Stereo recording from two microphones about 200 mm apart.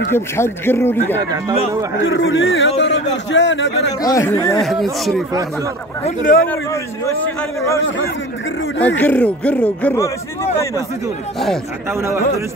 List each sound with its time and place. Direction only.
0.1 s speech: 10° left (ahead or behind)
2.0 s a man's voice: 70° left (ahead or behind)
4.0 s speech: 15° left (ahead or behind)
4.6 s speech: centre (ahead or behind)
6.0 s speech: 40° left (ahead or behind)
6.4 s speech: 10° left (ahead or behind)
8.8 s speech: 10° left (ahead or behind)
11.3 s speech: centre (ahead or behind)
11.9 s a man's voice: 15° right (ahead or behind)